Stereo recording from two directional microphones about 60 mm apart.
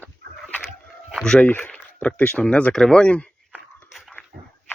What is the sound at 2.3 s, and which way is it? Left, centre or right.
Speech, centre.